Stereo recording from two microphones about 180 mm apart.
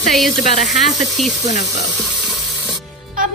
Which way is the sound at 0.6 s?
40° left (ahead or behind).